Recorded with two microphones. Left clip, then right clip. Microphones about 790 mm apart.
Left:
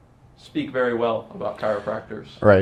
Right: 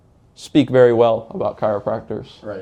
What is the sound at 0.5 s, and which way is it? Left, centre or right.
Speech, right.